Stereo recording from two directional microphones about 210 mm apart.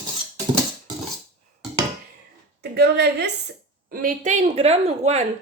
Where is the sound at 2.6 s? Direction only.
50° right (ahead or behind).